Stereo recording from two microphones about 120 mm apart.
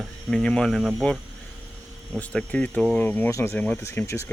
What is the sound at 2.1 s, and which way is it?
Speech, 10° left (ahead or behind).